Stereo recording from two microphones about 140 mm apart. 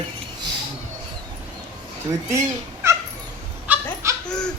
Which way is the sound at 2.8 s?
20° right (ahead or behind).